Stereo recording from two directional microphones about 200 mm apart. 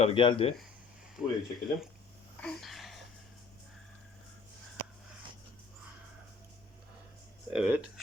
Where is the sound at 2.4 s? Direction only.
Centre (ahead or behind).